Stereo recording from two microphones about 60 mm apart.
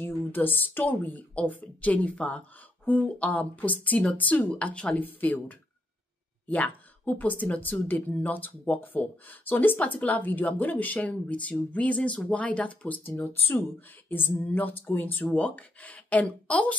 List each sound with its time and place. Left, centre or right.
0.0 s speech: left
6.4 s speech: left
13.0 s speech: left